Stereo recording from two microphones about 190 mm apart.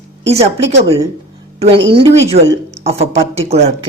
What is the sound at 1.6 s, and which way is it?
Speech, 25° right (ahead or behind).